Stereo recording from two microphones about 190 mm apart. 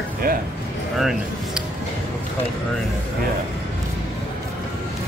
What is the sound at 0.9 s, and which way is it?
Speech, centre (ahead or behind).